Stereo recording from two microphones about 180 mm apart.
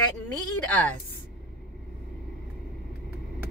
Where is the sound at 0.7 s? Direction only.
10° left (ahead or behind).